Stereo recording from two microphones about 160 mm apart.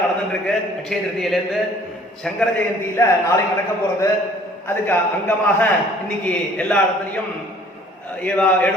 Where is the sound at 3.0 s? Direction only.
15° left (ahead or behind).